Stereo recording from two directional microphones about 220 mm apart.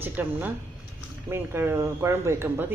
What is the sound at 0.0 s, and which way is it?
Speech, 10° right (ahead or behind).